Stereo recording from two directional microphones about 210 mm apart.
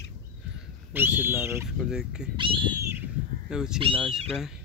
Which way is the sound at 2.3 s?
25° right (ahead or behind).